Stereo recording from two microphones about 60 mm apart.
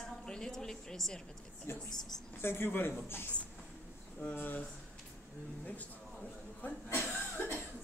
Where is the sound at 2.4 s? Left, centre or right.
Left.